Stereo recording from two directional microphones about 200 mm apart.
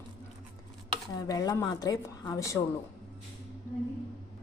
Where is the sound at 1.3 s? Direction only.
15° left (ahead or behind).